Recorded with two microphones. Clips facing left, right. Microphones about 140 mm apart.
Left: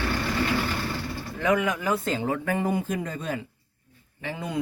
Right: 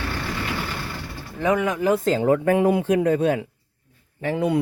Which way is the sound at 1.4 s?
25° right (ahead or behind).